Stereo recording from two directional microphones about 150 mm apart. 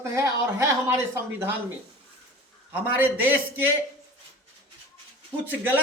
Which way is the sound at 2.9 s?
10° right (ahead or behind).